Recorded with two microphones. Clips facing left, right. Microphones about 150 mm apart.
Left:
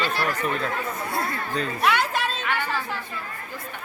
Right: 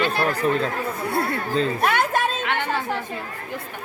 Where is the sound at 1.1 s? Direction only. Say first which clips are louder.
Right 5 dB; 60° right (ahead or behind).